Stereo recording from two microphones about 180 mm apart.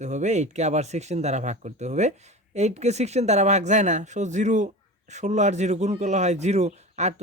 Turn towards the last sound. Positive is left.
turn(degrees=-40)  # may be behind; listen again after turning